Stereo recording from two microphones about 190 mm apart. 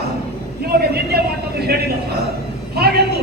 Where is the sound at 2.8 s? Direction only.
55° right (ahead or behind).